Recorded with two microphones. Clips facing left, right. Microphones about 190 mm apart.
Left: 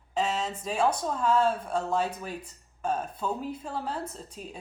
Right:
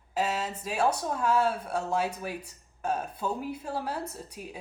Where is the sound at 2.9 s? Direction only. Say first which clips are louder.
Left 1 dB; 10° right (ahead or behind).